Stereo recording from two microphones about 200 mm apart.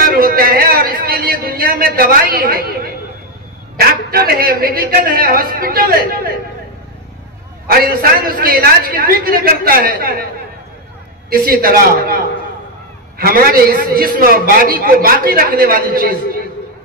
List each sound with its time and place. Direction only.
0.2 s a sound: 45° right (ahead or behind)
3.7 s a man's voice: 50° right (ahead or behind)
7.6 s a man's voice: 50° right (ahead or behind)
11.2 s a man's voice: 50° right (ahead or behind)